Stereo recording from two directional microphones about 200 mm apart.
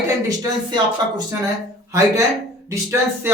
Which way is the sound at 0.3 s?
20° right (ahead or behind).